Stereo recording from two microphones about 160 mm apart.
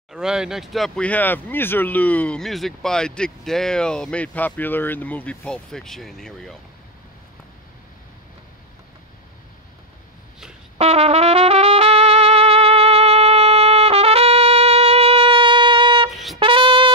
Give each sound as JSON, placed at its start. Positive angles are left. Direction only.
{"t": 0.1, "sound": "speech", "side_deg": -5}
{"t": 10.8, "sound": "trumpet", "side_deg": -40}
{"t": 16.1, "sound": "brass instrument", "side_deg": 0}
{"t": 16.3, "sound": "music", "side_deg": -30}